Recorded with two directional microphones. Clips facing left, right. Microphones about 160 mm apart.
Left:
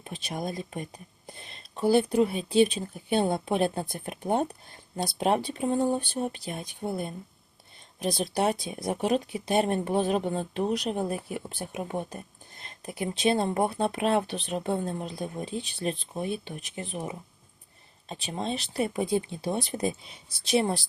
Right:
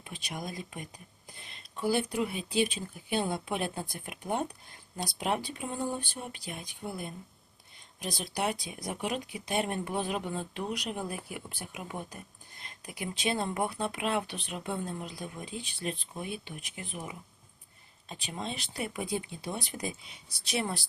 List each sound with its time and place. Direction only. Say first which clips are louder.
0.3 s speech: left 6 dB; 30° left (ahead or behind)
8.0 s speech: left 7 dB; 30° left (ahead or behind)